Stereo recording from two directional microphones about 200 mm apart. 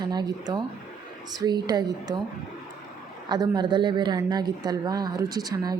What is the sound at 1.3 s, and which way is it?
Speech, 20° right (ahead or behind).